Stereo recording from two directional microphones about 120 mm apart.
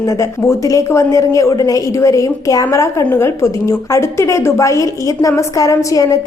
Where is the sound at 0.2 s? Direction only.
25° left (ahead or behind).